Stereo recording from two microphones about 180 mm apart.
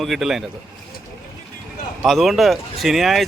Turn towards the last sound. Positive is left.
turn(degrees=0)  # may be behind; listen again after turning